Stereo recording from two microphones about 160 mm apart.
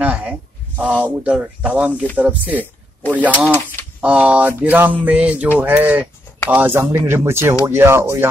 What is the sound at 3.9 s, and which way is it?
A man's voice, 10° right (ahead or behind).